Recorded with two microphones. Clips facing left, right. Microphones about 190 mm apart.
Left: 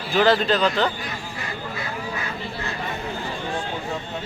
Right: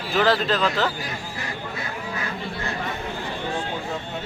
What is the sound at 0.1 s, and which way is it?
Speech, centre (ahead or behind).